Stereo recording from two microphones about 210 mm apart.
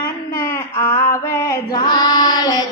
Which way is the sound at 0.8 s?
10° left (ahead or behind).